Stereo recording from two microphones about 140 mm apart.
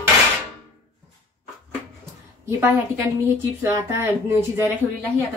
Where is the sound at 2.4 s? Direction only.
20° right (ahead or behind).